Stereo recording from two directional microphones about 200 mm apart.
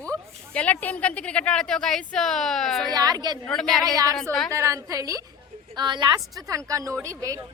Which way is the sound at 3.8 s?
20° right (ahead or behind).